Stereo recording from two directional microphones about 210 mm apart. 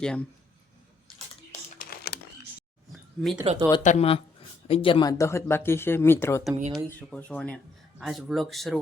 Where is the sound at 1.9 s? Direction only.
50° left (ahead or behind).